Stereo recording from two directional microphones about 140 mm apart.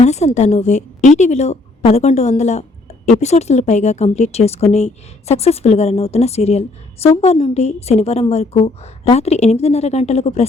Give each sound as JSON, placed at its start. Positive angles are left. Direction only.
{"t": 0.0, "sound": "a woman's voice", "side_deg": 55}